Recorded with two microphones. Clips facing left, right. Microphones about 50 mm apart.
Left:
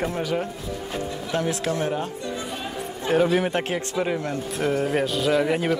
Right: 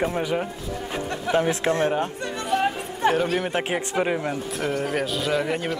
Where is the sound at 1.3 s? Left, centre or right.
Right.